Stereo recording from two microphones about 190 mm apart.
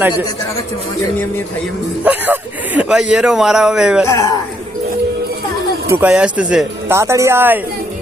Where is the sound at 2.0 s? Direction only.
10° right (ahead or behind).